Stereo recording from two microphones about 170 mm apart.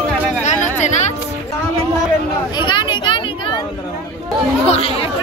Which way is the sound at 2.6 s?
30° left (ahead or behind).